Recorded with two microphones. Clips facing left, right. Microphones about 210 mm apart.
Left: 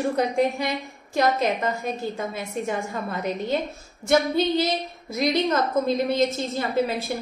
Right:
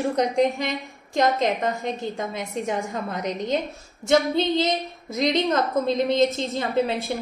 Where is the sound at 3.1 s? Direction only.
15° right (ahead or behind).